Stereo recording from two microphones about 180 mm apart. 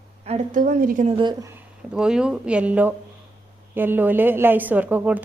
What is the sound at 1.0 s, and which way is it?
Speech, 30° right (ahead or behind).